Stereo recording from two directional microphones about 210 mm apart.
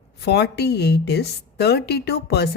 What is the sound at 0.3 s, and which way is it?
Speech, 50° left (ahead or behind).